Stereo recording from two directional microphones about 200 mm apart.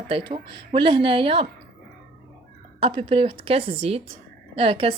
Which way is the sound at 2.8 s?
25° right (ahead or behind).